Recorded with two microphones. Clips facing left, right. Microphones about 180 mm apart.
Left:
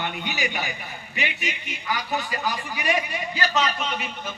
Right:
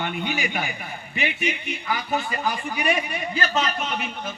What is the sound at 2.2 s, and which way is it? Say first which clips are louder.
A man's voice: right 2 dB; 50° right (ahead or behind).